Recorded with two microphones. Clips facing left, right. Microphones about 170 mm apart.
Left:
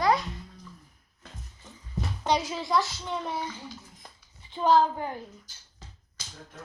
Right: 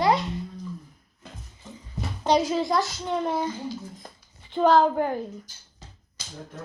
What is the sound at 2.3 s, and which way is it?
A child's voice, 40° right (ahead or behind).